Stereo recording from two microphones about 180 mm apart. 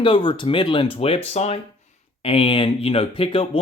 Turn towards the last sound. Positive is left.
turn(degrees=30)  # may be behind; listen again after turning